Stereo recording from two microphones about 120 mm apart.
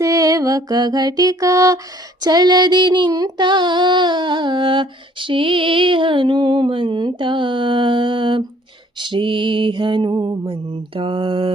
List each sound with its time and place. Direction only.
0.0 s music: 30° right (ahead or behind)
2.2 s female singing: 35° right (ahead or behind)
9.0 s mantra: 45° right (ahead or behind)